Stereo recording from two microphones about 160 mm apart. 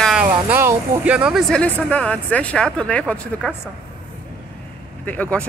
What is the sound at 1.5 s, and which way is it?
Speech, 5° left (ahead or behind).